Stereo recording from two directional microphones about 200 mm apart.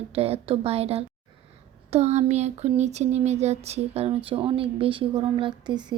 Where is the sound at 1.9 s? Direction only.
35° right (ahead or behind).